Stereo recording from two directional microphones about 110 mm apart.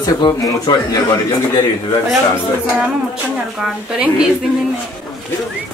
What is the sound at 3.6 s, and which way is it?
Speech, 5° right (ahead or behind).